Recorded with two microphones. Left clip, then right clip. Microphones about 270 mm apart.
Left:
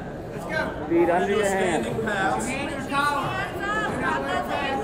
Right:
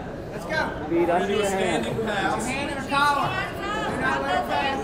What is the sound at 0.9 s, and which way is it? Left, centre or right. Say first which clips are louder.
Speech: left 1 dB; left.